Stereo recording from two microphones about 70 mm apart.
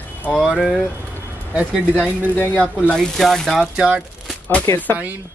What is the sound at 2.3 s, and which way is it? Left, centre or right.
Speech, left.